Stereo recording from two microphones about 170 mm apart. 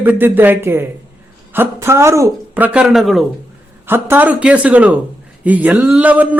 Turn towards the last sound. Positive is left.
turn(degrees=-10)  # may be behind; listen again after turning